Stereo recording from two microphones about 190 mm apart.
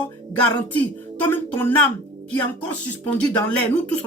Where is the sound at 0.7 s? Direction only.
10° left (ahead or behind).